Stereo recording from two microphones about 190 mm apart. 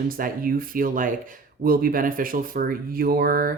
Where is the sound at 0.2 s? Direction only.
50° right (ahead or behind).